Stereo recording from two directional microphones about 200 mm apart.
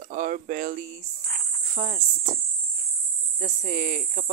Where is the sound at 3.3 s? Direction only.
40° right (ahead or behind).